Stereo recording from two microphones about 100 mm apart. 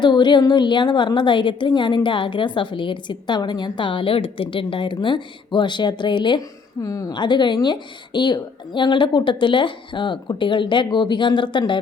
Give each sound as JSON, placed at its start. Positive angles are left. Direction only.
{"t": 0.0, "sound": "a woman's voice", "side_deg": 50}
{"t": 6.8, "sound": "a woman's voice", "side_deg": 35}
{"t": 7.1, "sound": "a woman's voice", "side_deg": 50}